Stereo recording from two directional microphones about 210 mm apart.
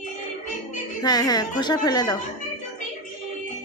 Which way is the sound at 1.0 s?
20° left (ahead or behind).